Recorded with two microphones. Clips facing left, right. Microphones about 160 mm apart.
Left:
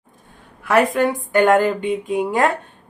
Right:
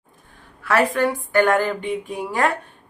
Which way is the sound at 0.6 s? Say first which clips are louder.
Left 3 dB; 20° left (ahead or behind).